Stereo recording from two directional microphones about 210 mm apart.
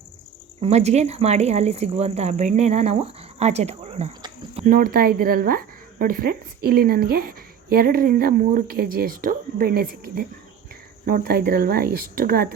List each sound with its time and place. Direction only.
0.6 s speech: 30° right (ahead or behind)
4.6 s speech: 40° right (ahead or behind)